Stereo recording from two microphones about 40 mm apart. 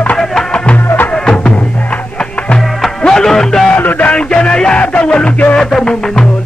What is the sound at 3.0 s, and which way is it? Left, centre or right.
Music, centre.